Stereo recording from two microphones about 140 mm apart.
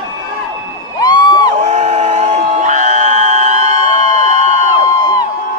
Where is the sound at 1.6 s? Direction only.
50° right (ahead or behind).